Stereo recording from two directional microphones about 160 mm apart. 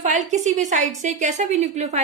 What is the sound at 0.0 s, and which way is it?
A woman's voice, 50° right (ahead or behind).